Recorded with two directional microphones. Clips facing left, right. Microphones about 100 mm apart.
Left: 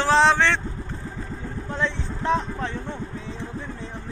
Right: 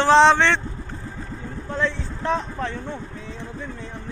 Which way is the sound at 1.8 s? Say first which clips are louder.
Right 2 dB; 20° left (ahead or behind).